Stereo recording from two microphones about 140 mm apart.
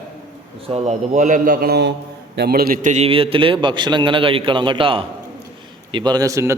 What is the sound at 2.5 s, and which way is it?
Speech, 90° right.